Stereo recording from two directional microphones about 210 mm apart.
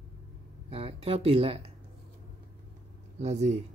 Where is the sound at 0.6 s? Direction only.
30° right (ahead or behind).